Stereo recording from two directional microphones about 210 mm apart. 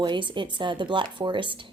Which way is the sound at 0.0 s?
20° right (ahead or behind).